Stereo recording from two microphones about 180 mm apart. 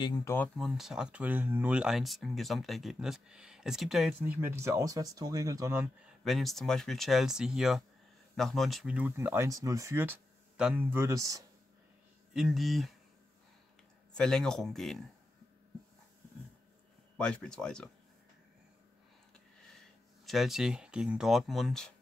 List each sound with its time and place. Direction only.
0.0 s speech: 20° left (ahead or behind)
0.6 s speech: centre (ahead or behind)
4.2 s speech: 10° right (ahead or behind)
6.2 s speech: centre (ahead or behind); by 11.4 s 15° right (ahead or behind)
12.4 s speech: centre (ahead or behind)
14.1 s speech: 5° left (ahead or behind)
17.2 s speech: 5° left (ahead or behind)
20.2 s speech: centre (ahead or behind)